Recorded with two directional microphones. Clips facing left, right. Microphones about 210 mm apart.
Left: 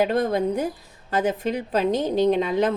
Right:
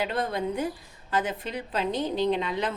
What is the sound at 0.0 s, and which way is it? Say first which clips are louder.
A woman's voice: left 7 dB; 45° left (ahead or behind).